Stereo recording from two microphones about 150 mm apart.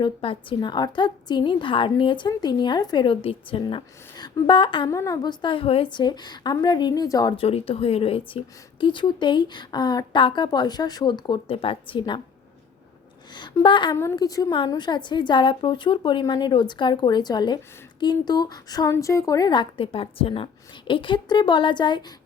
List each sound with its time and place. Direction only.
0.0 s a woman's voice: 35° left (ahead or behind)
4.9 s a woman's voice: 20° left (ahead or behind)
13.3 s a woman's voice: 30° left (ahead or behind)
13.9 s a woman's voice: 20° left (ahead or behind)